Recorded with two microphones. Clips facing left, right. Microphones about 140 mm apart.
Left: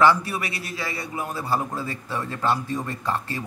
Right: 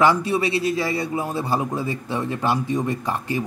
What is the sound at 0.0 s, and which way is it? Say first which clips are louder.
A man's voice: right 2 dB; 20° right (ahead or behind).